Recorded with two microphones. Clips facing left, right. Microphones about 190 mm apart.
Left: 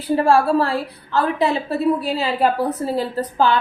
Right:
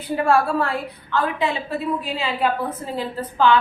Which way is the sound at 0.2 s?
30° left (ahead or behind).